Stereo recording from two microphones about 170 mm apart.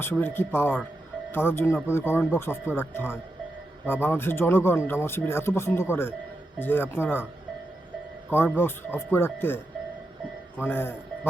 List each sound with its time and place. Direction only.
0.0 s speech: 15° left (ahead or behind)
8.3 s speech: 15° left (ahead or behind)
10.6 s speech: 15° left (ahead or behind)